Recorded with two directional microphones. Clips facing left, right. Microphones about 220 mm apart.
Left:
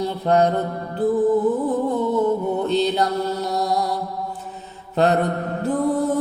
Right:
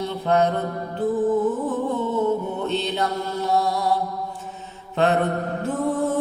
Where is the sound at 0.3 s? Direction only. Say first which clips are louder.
Left 2 dB; 35° left (ahead or behind).